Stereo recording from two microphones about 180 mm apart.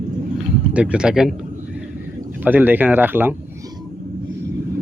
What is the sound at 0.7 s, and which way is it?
Speech, 5° right (ahead or behind).